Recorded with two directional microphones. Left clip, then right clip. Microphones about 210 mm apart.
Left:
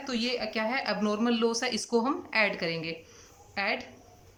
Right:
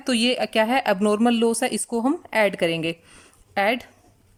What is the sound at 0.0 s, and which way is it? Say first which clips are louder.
Speech: right 9 dB; 45° right (ahead or behind).